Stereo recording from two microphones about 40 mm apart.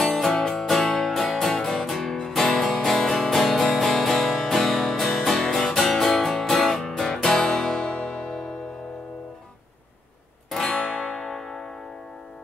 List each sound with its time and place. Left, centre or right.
0.0 s music: centre
10.7 s music: left
11.2 s music: centre